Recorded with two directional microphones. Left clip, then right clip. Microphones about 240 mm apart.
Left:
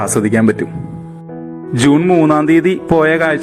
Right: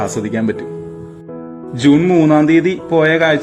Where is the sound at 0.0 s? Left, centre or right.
Centre.